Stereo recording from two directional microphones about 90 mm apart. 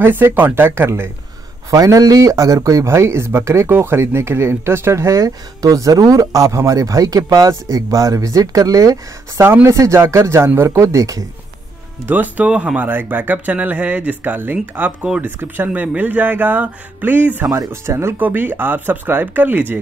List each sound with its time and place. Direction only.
0.0 s speech: 25° right (ahead or behind)
1.7 s speech: 40° right (ahead or behind)
9.4 s speech: 25° right (ahead or behind)
12.1 s speech: 20° right (ahead or behind)
17.5 s speech: 30° right (ahead or behind)